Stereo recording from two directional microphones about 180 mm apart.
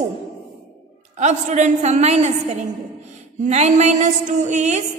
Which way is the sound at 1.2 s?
40° right (ahead or behind).